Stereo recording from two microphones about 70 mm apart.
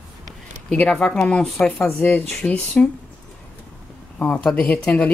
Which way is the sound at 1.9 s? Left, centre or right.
Left.